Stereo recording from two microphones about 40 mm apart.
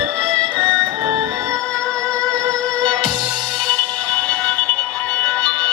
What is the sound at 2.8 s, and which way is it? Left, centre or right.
Music, left.